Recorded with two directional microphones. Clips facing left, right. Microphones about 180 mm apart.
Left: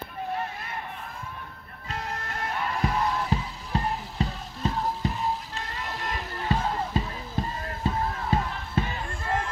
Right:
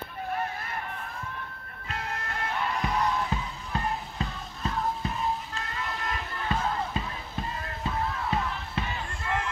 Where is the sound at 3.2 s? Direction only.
35° left (ahead or behind).